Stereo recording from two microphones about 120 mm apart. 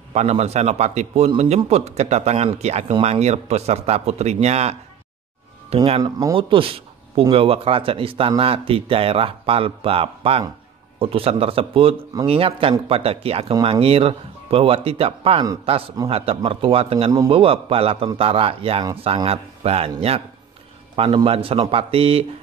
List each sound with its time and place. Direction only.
0.1 s a man's voice: 65° right (ahead or behind)
5.9 s speech: 30° right (ahead or behind)
6.3 s a man's voice: 45° right (ahead or behind)
20.9 s speech: 45° right (ahead or behind)